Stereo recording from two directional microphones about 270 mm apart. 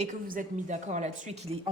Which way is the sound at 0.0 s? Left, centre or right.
Right.